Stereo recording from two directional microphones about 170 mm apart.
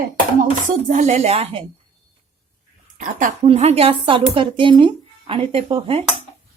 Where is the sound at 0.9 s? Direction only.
45° right (ahead or behind).